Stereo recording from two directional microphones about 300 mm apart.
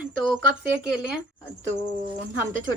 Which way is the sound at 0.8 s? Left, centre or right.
Centre.